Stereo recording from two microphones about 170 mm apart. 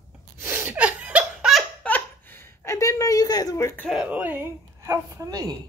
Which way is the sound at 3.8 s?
Centre (ahead or behind).